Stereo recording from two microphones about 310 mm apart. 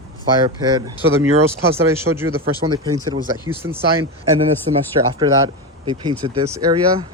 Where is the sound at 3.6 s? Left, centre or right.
Right.